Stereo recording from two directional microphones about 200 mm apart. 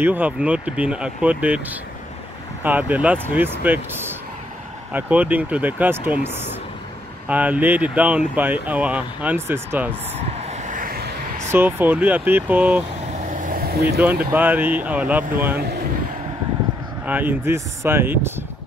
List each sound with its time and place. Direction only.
0.0 s speech: 10° right (ahead or behind)
10.5 s vehicle: 40° right (ahead or behind)
11.5 s speech: 10° right (ahead or behind)
13.3 s vehicle: 40° right (ahead or behind)
14.3 s speech: 10° right (ahead or behind)
17.0 s speech: 10° right (ahead or behind)